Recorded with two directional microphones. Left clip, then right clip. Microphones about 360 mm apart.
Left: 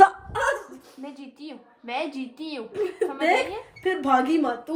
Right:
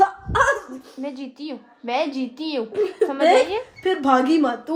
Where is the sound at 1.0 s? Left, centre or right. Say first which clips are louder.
Right 8 dB; centre.